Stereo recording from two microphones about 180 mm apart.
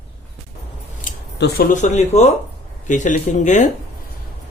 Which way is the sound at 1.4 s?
55° left (ahead or behind).